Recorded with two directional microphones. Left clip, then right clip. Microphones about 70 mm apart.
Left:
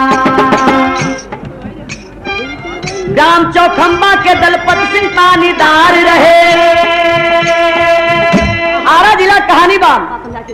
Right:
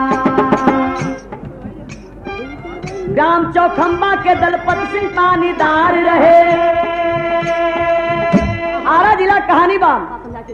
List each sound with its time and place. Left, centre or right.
0.0 s music: right
3.2 s music: right
9.0 s a woman's voice: centre